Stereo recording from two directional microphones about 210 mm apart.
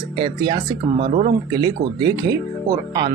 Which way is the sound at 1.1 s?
50° right (ahead or behind).